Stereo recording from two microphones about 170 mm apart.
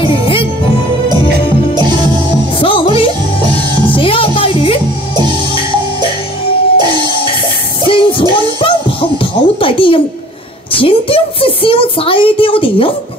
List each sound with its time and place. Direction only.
0.0 s music: 30° left (ahead or behind)
2.6 s music: 30° left (ahead or behind)
5.1 s music: 25° right (ahead or behind)
6.8 s music: 25° right (ahead or behind)
7.8 s music: 30° left (ahead or behind)
10.7 s a woman's voice: 30° left (ahead or behind)